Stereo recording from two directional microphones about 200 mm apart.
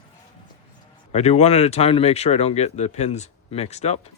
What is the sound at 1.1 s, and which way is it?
Speech, 35° left (ahead or behind).